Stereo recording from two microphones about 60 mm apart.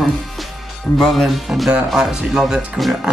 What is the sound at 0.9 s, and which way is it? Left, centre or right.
Speech, centre.